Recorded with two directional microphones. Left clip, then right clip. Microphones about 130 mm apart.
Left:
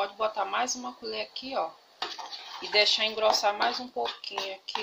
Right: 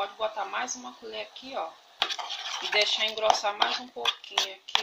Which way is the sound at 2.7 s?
15° left (ahead or behind).